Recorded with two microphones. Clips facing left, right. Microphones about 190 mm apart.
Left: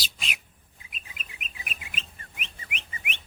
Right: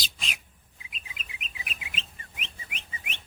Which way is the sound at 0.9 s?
50° left (ahead or behind).